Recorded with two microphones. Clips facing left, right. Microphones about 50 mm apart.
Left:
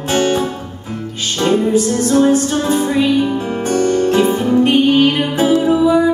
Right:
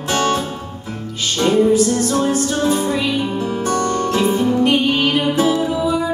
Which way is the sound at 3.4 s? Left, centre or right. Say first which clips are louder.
Left 3 dB; left.